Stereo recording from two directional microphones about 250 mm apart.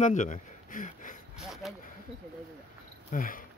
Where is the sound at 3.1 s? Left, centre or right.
Left.